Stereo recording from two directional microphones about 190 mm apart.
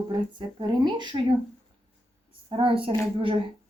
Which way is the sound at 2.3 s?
30° right (ahead or behind).